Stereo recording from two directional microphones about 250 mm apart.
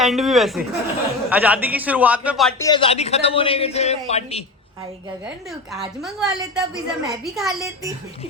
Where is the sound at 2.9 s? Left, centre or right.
Left.